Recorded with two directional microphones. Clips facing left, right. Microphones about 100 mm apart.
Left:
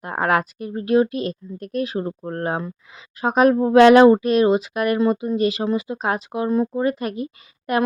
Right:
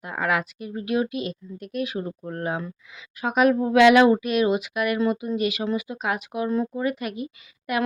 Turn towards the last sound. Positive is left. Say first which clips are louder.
# left 5 dB
turn(degrees=40)  # may be behind; listen again after turning